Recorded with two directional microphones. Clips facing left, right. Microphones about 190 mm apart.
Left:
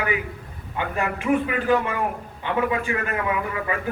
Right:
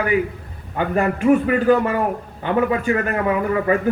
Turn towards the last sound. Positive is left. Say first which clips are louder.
# right 7 dB
turn(degrees=-40)  # may be behind; listen again after turning